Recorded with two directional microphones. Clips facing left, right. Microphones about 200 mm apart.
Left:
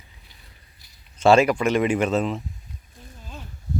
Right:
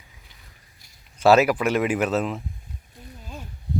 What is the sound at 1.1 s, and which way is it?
Speech, 5° right (ahead or behind).